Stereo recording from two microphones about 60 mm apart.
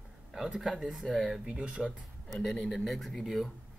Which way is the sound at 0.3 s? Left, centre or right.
Centre.